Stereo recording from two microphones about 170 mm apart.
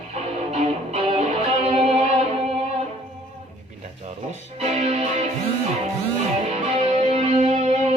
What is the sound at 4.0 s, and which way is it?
Music, 40° right (ahead or behind).